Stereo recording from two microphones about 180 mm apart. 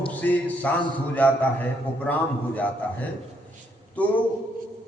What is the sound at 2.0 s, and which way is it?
Speech, 10° left (ahead or behind).